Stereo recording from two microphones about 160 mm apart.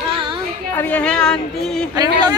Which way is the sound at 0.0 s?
30° right (ahead or behind).